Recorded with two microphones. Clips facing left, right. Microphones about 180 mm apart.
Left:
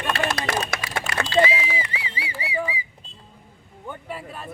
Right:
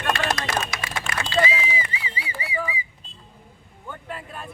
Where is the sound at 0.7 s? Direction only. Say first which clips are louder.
Left 3 dB; 55° left (ahead or behind).